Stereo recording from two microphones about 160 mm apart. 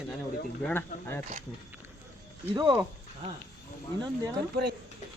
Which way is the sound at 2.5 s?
30° right (ahead or behind).